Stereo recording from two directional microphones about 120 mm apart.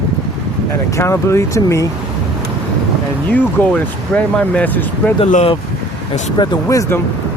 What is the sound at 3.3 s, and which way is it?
Speech, 10° left (ahead or behind).